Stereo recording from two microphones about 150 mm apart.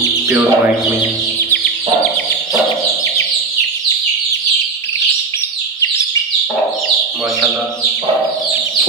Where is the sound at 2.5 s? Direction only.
20° left (ahead or behind).